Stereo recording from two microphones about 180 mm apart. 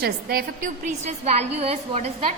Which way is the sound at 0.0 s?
55° right (ahead or behind).